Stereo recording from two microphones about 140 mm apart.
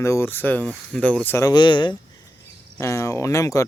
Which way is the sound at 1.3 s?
25° left (ahead or behind).